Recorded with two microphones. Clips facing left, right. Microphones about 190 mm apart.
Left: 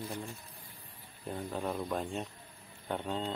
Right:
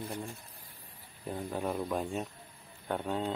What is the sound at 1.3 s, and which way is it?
Speech, 10° right (ahead or behind).